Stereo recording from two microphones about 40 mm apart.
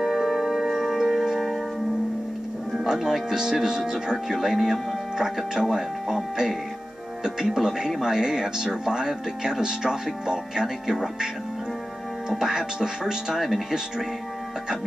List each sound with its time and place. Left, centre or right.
0.0 s music: centre
2.7 s speech: centre
12.3 s speech: centre
13.4 s speech: centre